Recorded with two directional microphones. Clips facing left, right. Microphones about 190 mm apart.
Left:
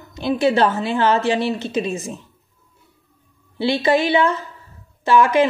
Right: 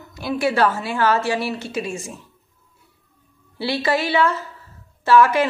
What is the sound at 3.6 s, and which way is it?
A woman's voice, 20° left (ahead or behind).